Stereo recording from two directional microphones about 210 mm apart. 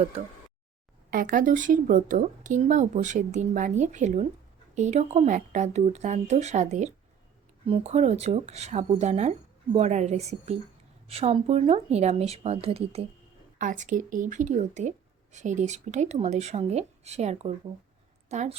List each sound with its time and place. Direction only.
1.1 s a woman's voice: 40° right (ahead or behind)